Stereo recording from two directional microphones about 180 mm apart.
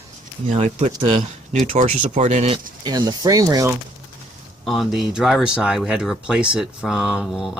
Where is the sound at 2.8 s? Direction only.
20° right (ahead or behind).